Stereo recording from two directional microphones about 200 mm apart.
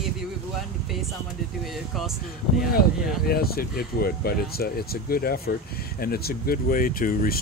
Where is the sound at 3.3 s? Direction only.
50° left (ahead or behind).